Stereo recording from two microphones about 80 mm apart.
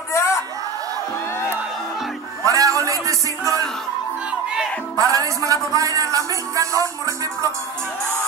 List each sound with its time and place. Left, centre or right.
0.1 s a sound: left
2.4 s music: right
4.9 s a man's voice: right